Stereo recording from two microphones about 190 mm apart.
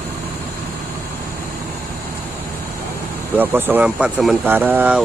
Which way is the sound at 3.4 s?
10° right (ahead or behind).